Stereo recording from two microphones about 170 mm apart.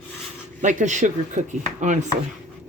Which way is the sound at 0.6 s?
45° right (ahead or behind).